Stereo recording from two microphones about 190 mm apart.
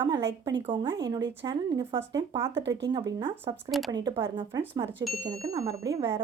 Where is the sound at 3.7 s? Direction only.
Centre (ahead or behind).